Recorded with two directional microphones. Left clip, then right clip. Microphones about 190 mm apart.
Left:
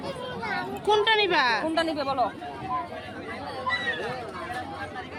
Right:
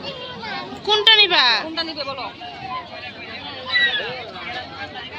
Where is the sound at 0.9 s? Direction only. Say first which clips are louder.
Right 8 dB; 10° left (ahead or behind).